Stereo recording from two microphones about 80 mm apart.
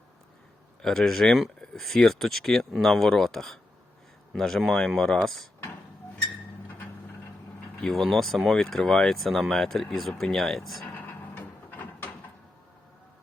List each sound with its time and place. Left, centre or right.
0.8 s speech: centre
7.9 s speech: centre
10.9 s a sound: left